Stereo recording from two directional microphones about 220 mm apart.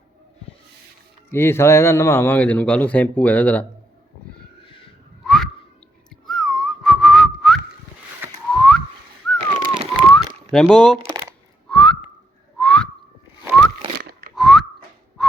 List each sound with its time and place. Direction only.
1.3 s speech: 10° left (ahead or behind)
5.2 s whistling: centre (ahead or behind)
9.4 s a sound: 25° right (ahead or behind)
10.0 s a sound: 5° left (ahead or behind)
10.5 s speech: 5° left (ahead or behind)
11.0 s a sound: 15° right (ahead or behind)
11.7 s whistling: 5° left (ahead or behind)
14.1 s whistling: 45° right (ahead or behind)
14.3 s whistling: centre (ahead or behind)